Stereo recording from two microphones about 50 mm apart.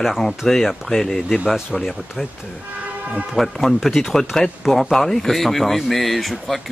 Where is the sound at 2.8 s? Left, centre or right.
Right.